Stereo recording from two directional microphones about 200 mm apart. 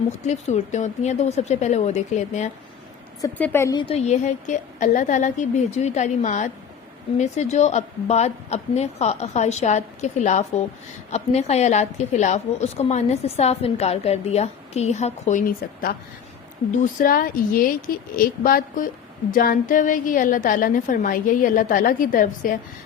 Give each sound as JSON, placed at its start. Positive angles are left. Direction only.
{"t": 0.3, "sound": "a woman's voice", "side_deg": 35}
{"t": 3.2, "sound": "a woman's voice", "side_deg": 10}
{"t": 3.8, "sound": "a woman's voice", "side_deg": 35}